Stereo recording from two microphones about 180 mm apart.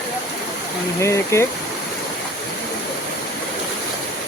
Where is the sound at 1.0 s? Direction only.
15° left (ahead or behind).